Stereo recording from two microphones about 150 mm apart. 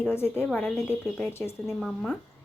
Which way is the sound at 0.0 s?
15° left (ahead or behind).